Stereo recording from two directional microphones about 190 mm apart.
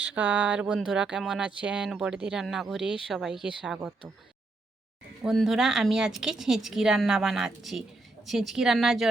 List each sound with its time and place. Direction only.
0.0 s speech: 5° right (ahead or behind)
5.2 s speech: centre (ahead or behind)